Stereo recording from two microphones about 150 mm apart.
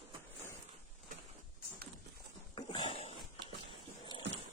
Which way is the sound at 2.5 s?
35° left (ahead or behind).